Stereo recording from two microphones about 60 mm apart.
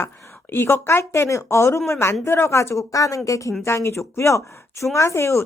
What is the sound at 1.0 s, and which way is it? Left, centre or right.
Speech, left.